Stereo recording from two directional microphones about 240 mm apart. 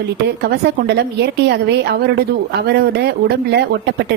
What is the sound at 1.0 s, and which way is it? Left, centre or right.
A woman's voice, right.